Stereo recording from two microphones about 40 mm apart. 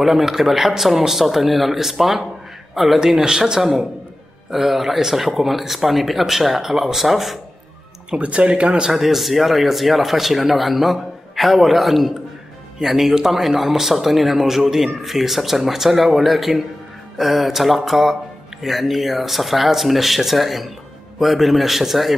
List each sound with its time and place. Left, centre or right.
0.0 s a man's voice: centre
3.3 s speech: centre
8.1 s speech: right
8.9 s speech: centre